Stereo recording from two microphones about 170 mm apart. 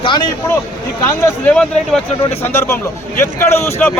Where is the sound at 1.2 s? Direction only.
10° left (ahead or behind).